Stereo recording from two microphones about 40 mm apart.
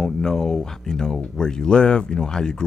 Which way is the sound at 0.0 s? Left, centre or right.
Centre.